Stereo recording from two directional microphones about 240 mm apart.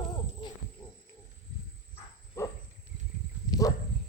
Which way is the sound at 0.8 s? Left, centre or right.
Centre.